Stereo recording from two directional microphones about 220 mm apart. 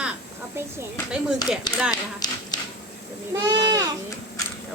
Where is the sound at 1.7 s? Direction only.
20° left (ahead or behind).